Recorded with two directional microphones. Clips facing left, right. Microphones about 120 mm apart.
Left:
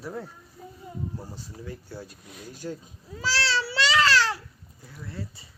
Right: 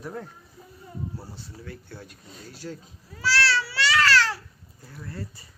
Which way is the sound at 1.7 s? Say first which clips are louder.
Left 4 dB; 10° left (ahead or behind).